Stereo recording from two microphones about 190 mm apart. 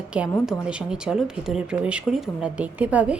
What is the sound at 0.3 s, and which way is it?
Speech, centre (ahead or behind).